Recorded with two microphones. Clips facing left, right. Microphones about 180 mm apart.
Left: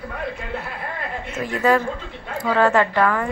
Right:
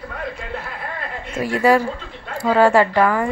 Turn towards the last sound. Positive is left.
turn(degrees=-10)  # may be behind; listen again after turning